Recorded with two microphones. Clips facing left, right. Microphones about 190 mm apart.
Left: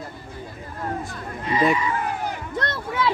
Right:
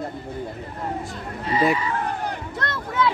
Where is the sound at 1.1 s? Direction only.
30° right (ahead or behind).